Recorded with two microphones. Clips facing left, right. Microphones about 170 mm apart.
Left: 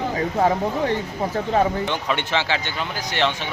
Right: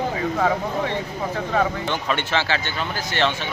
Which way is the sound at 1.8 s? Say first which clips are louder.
Even; 15° left (ahead or behind).